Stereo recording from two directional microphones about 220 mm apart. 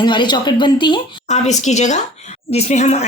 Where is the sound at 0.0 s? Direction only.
20° left (ahead or behind).